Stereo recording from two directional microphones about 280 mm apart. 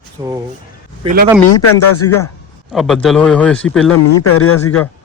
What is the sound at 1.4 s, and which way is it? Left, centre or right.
Speech, left.